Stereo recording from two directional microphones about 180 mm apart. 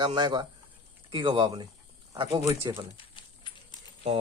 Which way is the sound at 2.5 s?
15° right (ahead or behind).